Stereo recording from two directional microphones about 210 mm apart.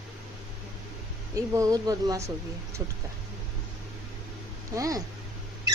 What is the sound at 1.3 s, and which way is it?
Speech, 15° right (ahead or behind).